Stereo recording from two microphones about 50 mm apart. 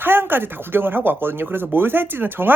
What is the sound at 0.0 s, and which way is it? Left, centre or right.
Speech, right.